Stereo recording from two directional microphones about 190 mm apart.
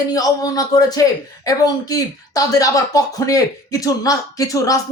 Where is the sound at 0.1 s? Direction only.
20° left (ahead or behind).